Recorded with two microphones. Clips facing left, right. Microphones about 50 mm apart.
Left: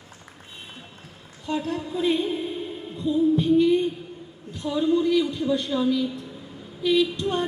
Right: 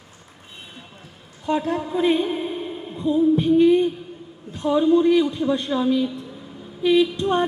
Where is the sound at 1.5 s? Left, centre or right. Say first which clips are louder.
Right 5 dB; right.